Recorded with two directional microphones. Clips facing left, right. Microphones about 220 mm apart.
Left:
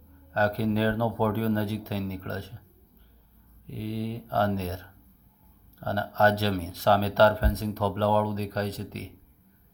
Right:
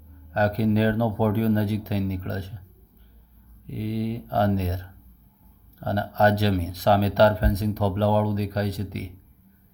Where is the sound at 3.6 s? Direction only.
15° right (ahead or behind).